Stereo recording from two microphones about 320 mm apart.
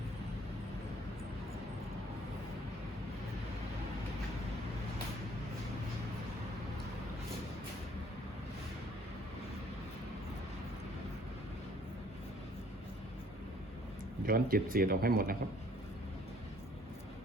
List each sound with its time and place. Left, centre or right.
14.3 s speech: right